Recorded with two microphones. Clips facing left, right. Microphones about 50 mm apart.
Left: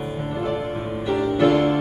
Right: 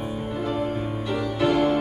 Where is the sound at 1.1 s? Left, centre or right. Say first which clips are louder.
Left 5 dB; centre.